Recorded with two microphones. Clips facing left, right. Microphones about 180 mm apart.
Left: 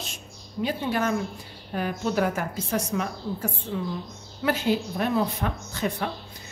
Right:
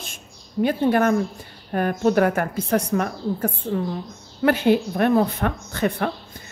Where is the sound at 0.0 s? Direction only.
55° right (ahead or behind).